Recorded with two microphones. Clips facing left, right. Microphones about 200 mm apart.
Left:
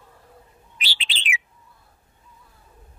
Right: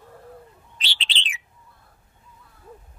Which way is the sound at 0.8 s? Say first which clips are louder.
Even; 10° left (ahead or behind).